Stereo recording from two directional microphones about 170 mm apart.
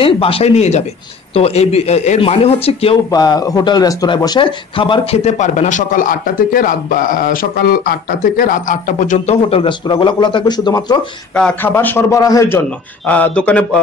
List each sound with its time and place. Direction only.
0.0 s speech: 35° left (ahead or behind)
3.1 s speech: 25° left (ahead or behind)
11.3 s a man's voice: 10° left (ahead or behind)
12.6 s a man's voice: 10° left (ahead or behind)